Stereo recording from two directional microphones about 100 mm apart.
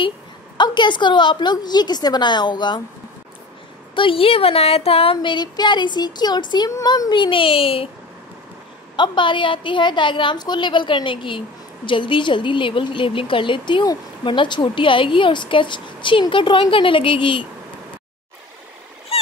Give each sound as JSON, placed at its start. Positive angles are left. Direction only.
{"t": 0.6, "sound": "speech", "side_deg": 50}
{"t": 3.9, "sound": "a woman's voice", "side_deg": 60}
{"t": 8.9, "sound": "a woman's voice", "side_deg": 50}